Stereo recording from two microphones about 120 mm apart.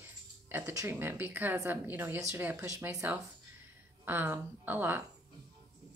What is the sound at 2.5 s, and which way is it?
Speech, 25° right (ahead or behind).